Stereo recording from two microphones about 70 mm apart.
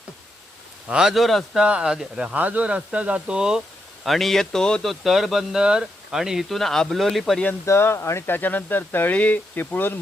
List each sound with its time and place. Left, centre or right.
0.9 s speech: centre
1.6 s speech: centre
2.3 s speech: right
4.0 s speech: centre
6.6 s speech: centre
7.6 s speech: left
8.3 s speech: left